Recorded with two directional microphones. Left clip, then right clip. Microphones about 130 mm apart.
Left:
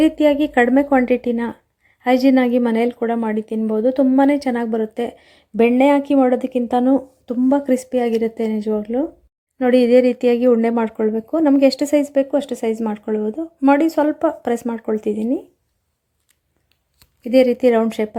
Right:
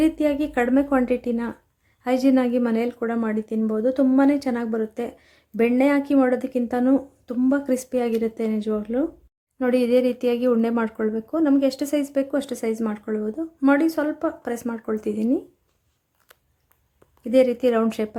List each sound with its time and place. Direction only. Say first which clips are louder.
0.0 s speech: left 6 dB; 20° left (ahead or behind)
17.3 s speech: left 5 dB; 25° left (ahead or behind)